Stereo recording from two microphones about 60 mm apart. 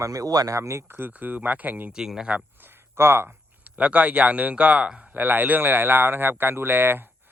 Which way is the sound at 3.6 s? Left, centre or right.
Right.